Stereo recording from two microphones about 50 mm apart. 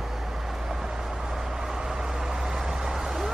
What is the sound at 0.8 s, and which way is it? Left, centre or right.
Vehicle, centre.